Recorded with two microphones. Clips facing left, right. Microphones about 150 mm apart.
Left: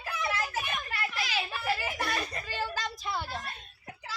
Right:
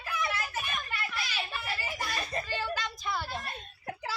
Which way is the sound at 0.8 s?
90° left.